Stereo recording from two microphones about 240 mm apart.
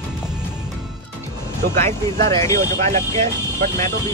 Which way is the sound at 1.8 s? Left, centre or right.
Centre.